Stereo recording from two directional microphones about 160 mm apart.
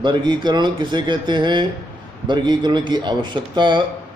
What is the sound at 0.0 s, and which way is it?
Speech, 30° right (ahead or behind).